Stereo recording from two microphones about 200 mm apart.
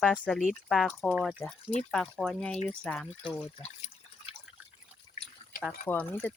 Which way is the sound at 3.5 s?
30° left (ahead or behind).